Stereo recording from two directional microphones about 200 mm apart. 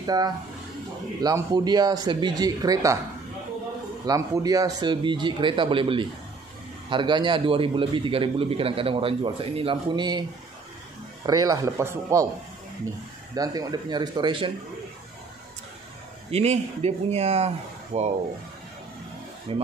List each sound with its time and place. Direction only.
0.0 s a man's voice: 20° right (ahead or behind)
4.0 s a man's voice: 20° right (ahead or behind)
11.2 s speech: 20° right (ahead or behind)
13.3 s a man's voice: 20° right (ahead or behind)
16.3 s speech: 30° right (ahead or behind)
19.5 s a man's voice: 30° right (ahead or behind)